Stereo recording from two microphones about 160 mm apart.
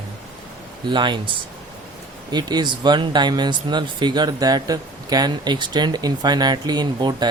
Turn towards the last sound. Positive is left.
turn(degrees=-25)  # may be behind; listen again after turning